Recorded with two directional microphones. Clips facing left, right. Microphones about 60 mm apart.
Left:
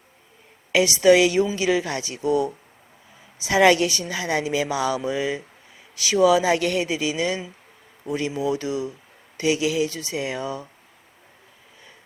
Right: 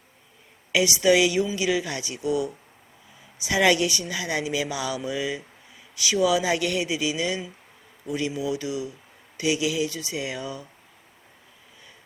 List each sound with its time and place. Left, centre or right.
0.7 s speech: left